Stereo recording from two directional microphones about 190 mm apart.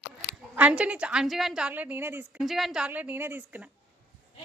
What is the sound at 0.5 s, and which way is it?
A woman's voice, 5° right (ahead or behind).